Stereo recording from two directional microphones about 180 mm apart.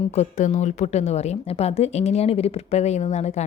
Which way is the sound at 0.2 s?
40° left (ahead or behind).